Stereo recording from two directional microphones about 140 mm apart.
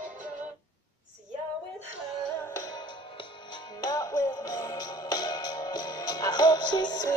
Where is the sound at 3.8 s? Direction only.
25° left (ahead or behind).